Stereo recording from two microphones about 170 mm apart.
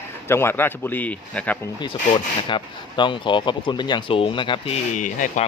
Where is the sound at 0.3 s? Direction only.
15° left (ahead or behind).